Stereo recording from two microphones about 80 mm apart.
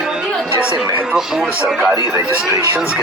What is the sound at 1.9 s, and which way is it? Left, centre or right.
Speech, right.